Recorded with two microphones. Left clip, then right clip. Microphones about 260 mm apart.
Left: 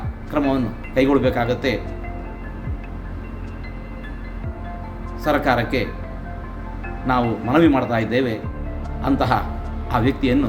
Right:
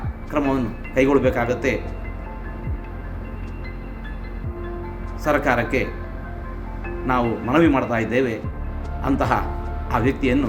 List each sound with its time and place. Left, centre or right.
0.3 s speech: centre
5.2 s speech: centre
7.1 s speech: centre